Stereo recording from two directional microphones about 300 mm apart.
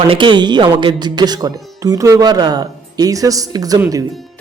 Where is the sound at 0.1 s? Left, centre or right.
Centre.